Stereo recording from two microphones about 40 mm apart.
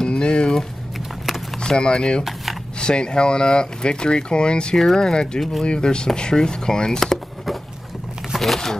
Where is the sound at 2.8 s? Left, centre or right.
Left.